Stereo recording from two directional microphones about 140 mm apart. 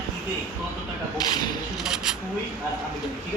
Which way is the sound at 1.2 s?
30° left (ahead or behind).